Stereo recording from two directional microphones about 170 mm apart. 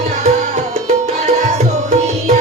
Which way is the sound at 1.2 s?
45° right (ahead or behind).